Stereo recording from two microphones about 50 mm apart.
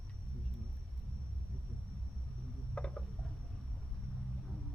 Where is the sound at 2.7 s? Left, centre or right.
Centre.